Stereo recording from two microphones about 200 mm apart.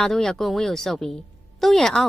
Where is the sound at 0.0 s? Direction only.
Centre (ahead or behind).